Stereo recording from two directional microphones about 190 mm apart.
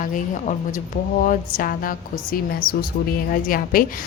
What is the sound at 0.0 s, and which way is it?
A woman's voice, 45° left (ahead or behind).